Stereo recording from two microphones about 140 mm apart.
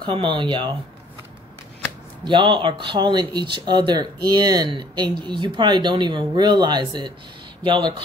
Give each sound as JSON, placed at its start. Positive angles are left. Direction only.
{"t": 0.0, "sound": "speech", "side_deg": -35}
{"t": 2.2, "sound": "speech", "side_deg": -35}